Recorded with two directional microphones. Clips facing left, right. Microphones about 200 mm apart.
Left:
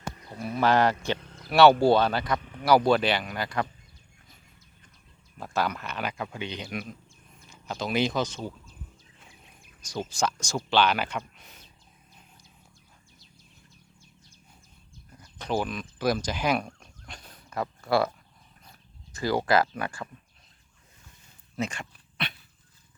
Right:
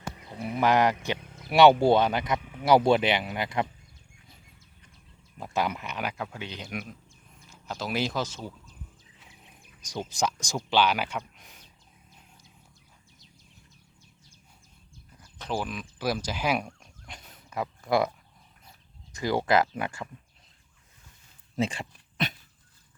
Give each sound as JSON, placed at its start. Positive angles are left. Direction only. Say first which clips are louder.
{"t": 0.2, "sound": "speech", "louder": "even", "side_deg": -15}
{"t": 2.4, "sound": "a sound", "louder": "right 1 dB", "side_deg": -10}
{"t": 2.6, "sound": "speech", "louder": "even", "side_deg": -25}
{"t": 5.4, "sound": "speech", "louder": "even", "side_deg": -15}
{"t": 9.8, "sound": "speech", "louder": "left 1 dB", "side_deg": -15}
{"t": 15.2, "sound": "speech", "louder": "left 3 dB", "side_deg": -5}
{"t": 19.1, "sound": "speech", "louder": "even", "side_deg": -20}
{"t": 21.5, "sound": "dog", "louder": "right 3 dB", "side_deg": -30}